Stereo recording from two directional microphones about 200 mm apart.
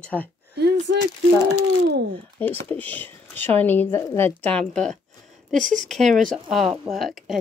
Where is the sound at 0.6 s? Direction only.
55° right (ahead or behind).